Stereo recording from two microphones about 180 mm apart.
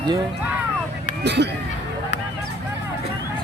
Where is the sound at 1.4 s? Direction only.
70° right (ahead or behind).